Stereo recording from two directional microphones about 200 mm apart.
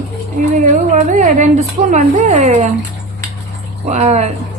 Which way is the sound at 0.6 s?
35° right (ahead or behind).